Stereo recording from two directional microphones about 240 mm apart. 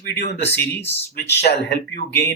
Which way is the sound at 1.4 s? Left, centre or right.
Left.